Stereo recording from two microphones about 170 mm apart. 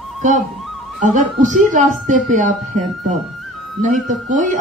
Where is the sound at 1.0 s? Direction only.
45° right (ahead or behind).